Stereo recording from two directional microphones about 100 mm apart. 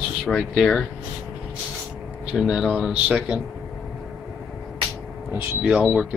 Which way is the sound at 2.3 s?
5° right (ahead or behind).